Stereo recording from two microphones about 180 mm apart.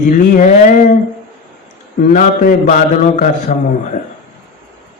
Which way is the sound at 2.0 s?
45° left (ahead or behind).